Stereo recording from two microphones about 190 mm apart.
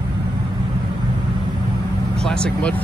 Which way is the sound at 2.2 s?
5° left (ahead or behind).